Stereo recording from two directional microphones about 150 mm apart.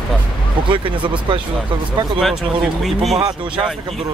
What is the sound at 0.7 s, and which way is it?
Speech, 35° right (ahead or behind).